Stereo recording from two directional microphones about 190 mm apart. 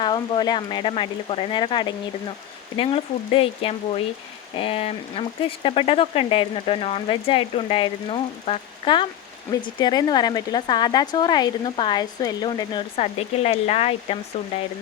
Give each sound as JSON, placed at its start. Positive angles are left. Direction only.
{"t": 0.0, "sound": "speech", "side_deg": 20}